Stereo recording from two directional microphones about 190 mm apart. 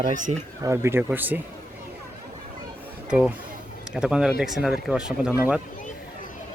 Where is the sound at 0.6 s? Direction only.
15° right (ahead or behind).